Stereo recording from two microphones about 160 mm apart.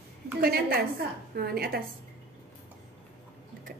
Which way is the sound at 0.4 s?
70° right (ahead or behind).